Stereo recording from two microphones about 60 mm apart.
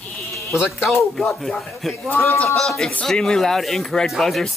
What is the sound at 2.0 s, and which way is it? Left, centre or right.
Speech, left.